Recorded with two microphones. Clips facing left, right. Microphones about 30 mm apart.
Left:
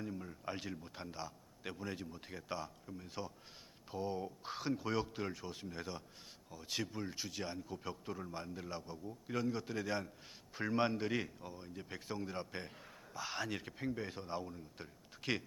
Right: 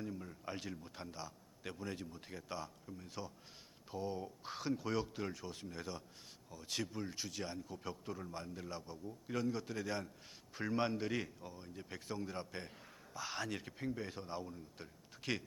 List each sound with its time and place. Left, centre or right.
0.0 s a man's voice: centre